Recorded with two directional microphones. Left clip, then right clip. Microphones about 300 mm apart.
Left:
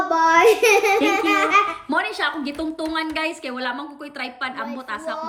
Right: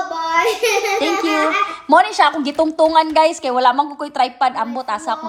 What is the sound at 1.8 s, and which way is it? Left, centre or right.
A woman's voice, centre.